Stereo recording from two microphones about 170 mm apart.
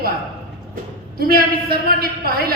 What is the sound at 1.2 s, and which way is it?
A man's voice, 60° right (ahead or behind).